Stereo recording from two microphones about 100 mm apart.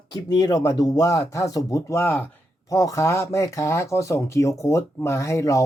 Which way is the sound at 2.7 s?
35° left (ahead or behind).